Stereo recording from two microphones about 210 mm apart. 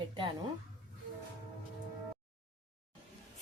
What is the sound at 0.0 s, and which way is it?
Speech, 25° right (ahead or behind).